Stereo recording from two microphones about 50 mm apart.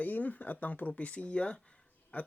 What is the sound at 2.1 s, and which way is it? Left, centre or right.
Speech, left.